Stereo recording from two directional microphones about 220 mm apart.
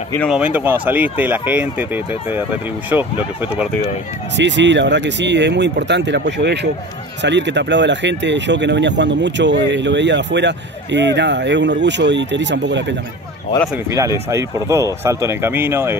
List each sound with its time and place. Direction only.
0.3 s speech: 5° right (ahead or behind)
2.9 s speech: 5° right (ahead or behind)
4.4 s speech: 55° right (ahead or behind)
13.8 s speech: 15° right (ahead or behind)